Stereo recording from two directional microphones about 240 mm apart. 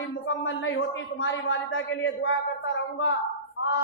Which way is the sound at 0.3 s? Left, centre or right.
Left.